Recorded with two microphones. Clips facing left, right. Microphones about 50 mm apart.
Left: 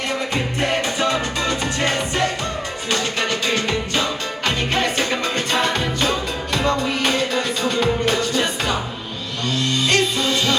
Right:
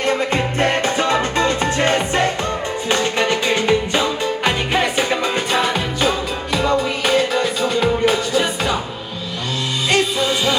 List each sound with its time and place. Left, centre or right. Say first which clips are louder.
0.6 s music: right 2 dB; right; by 8.7 s centre
9.9 s music: right 4 dB; centre